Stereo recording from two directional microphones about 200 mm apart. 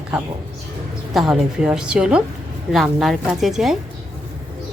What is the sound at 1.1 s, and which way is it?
A woman's voice, centre (ahead or behind).